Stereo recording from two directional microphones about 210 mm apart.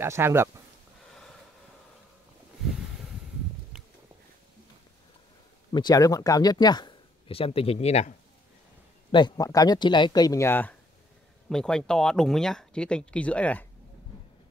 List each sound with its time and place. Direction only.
0.0 s speech: 10° right (ahead or behind)
5.7 s speech: 20° left (ahead or behind)
9.1 s speech: 20° left (ahead or behind)